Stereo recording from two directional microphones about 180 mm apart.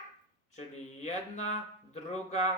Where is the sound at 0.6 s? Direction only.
40° left (ahead or behind).